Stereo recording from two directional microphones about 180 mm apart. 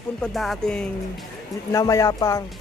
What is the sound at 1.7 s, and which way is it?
Speech, 20° left (ahead or behind).